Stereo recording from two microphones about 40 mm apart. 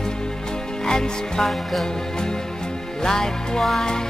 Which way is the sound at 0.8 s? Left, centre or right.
Centre.